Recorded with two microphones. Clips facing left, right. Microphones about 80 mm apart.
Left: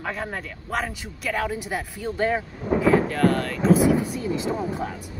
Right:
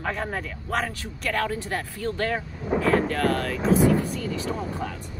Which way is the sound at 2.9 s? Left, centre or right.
Centre.